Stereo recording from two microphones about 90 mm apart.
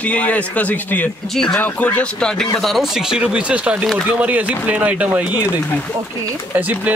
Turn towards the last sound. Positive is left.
turn(degrees=-20)  # may be behind; listen again after turning